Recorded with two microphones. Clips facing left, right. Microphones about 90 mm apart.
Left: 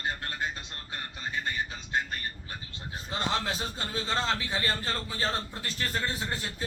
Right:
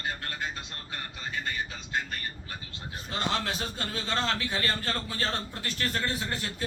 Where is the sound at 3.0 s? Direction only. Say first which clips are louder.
Even; 25° left (ahead or behind).